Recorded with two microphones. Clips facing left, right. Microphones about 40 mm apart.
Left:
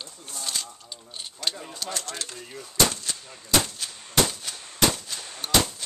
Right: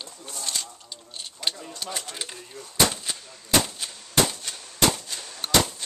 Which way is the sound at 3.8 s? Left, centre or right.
Centre.